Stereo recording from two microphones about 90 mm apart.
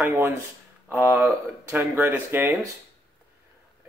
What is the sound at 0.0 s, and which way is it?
Speech, 30° right (ahead or behind).